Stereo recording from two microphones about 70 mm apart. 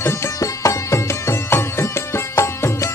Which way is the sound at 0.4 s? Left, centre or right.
Left.